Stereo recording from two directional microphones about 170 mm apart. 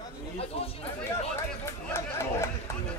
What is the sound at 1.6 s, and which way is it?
Chatter, 15° left (ahead or behind).